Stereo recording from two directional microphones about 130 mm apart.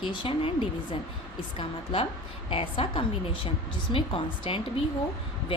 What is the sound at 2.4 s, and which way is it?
A woman's voice, 40° left (ahead or behind).